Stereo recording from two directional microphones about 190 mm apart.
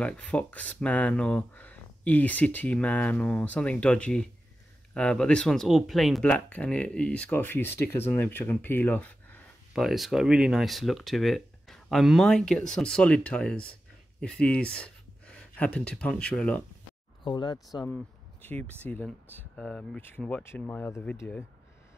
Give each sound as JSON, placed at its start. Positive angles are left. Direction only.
{"t": 0.0, "sound": "speech", "side_deg": 5}
{"t": 9.8, "sound": "speech", "side_deg": 0}
{"t": 17.2, "sound": "speech", "side_deg": 25}
{"t": 17.8, "sound": "speech", "side_deg": 10}